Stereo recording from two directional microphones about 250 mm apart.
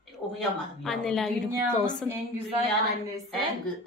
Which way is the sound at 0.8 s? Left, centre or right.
Centre.